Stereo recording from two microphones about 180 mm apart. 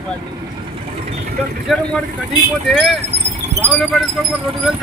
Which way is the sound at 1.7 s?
Centre (ahead or behind).